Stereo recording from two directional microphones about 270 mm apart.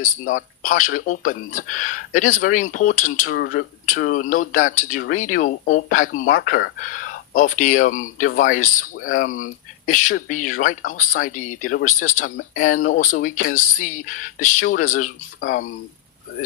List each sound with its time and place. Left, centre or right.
0.0 s speech: left